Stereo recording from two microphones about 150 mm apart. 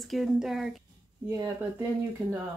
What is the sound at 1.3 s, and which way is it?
Speech, 20° right (ahead or behind).